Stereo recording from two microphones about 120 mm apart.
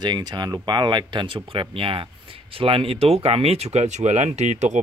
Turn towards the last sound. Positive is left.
turn(degrees=-70)  # may be behind; listen again after turning